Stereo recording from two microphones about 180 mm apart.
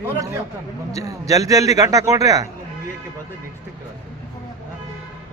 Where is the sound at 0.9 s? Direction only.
20° right (ahead or behind).